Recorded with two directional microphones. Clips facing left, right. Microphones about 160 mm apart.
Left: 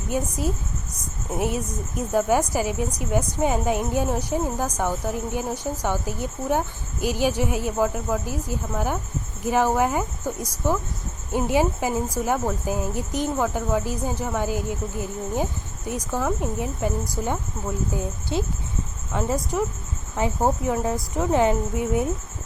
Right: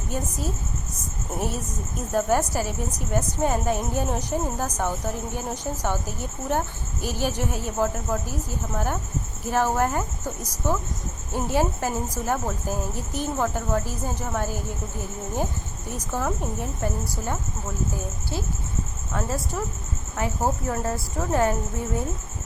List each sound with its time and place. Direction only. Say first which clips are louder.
0.1 s a woman's voice: left 4 dB; 10° left (ahead or behind)
15.9 s a woman's voice: left 3 dB; 10° left (ahead or behind)
17.9 s a woman's voice: left 5 dB; 20° left (ahead or behind)